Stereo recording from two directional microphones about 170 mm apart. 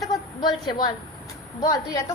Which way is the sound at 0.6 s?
25° left (ahead or behind).